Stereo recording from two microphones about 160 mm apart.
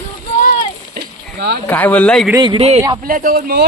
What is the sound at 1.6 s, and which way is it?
Speech, 10° left (ahead or behind).